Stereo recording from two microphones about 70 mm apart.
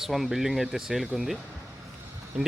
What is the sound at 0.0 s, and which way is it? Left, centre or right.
Speech, centre.